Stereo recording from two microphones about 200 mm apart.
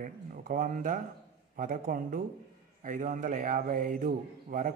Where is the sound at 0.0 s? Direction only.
45° right (ahead or behind).